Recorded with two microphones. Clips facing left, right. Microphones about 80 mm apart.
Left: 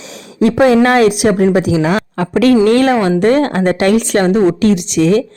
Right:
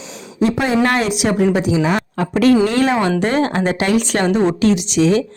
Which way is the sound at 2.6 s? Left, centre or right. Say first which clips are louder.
Left 5 dB; left.